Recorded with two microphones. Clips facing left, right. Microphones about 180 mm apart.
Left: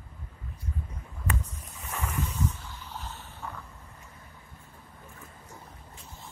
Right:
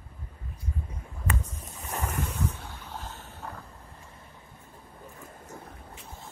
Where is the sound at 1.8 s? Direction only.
40° right (ahead or behind).